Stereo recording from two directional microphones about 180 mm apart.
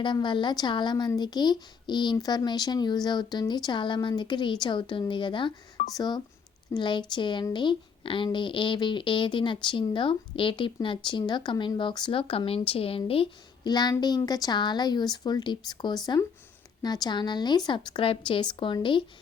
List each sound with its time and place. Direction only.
0.0 s speech: 25° left (ahead or behind)